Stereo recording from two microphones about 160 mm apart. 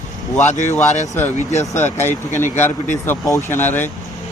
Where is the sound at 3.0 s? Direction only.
15° left (ahead or behind).